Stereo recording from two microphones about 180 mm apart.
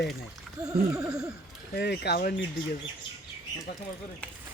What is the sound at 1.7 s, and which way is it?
Speech, 65° left (ahead or behind).